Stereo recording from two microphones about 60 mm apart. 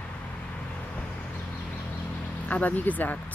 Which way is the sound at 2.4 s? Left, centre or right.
Left.